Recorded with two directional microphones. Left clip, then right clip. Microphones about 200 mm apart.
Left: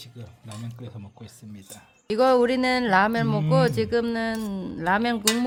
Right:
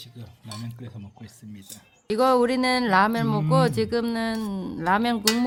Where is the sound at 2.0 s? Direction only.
5° left (ahead or behind).